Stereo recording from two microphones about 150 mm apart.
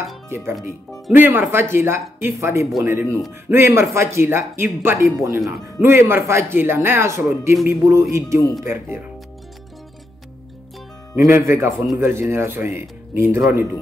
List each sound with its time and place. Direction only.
0.3 s speech: 15° right (ahead or behind)
7.6 s music: 20° right (ahead or behind)
8.6 s speech: 15° right (ahead or behind)
11.2 s speech: 15° right (ahead or behind)
11.7 s speech: centre (ahead or behind)
12.0 s speech: 15° right (ahead or behind)